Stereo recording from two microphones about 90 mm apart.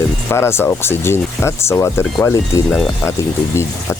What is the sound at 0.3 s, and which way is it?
Speech, 30° left (ahead or behind).